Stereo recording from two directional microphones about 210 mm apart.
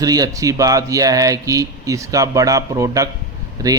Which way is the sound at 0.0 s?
15° right (ahead or behind).